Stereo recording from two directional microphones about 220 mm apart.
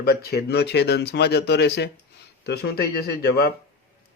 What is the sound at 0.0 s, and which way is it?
Speech, 45° left (ahead or behind).